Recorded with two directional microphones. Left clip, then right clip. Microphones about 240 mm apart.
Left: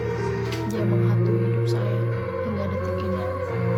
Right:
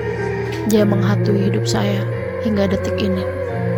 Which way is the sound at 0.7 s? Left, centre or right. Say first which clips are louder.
Right 12 dB; right.